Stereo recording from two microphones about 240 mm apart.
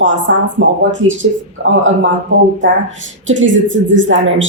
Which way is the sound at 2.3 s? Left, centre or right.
Right.